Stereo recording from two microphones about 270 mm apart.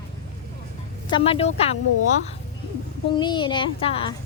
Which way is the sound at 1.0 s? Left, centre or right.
Centre.